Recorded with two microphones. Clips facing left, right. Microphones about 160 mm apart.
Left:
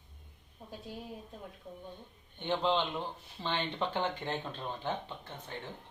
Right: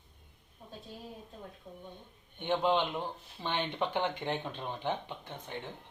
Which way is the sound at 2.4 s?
15° right (ahead or behind).